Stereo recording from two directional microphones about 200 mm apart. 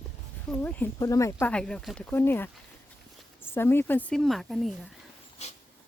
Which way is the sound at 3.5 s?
10° left (ahead or behind).